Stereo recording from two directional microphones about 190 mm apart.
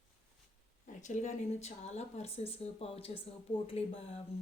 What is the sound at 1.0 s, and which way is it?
Speech, 40° left (ahead or behind).